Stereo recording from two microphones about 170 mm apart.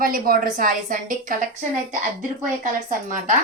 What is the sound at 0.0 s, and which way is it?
A woman's voice, 55° right (ahead or behind).